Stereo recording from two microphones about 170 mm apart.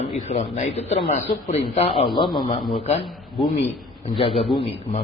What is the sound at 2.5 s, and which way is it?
Speech, 35° left (ahead or behind).